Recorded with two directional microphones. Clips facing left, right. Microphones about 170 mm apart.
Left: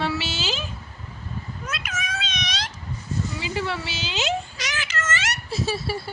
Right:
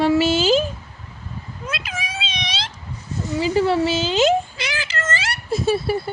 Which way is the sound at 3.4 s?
40° right (ahead or behind).